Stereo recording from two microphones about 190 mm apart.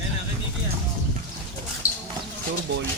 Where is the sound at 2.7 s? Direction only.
80° right.